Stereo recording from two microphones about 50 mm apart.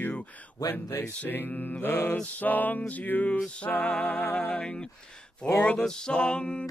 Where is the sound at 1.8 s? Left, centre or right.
Left.